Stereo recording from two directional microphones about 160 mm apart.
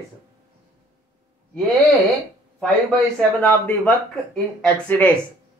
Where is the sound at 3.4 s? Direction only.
10° left (ahead or behind).